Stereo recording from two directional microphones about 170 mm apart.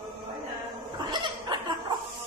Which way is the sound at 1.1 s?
25° right (ahead or behind).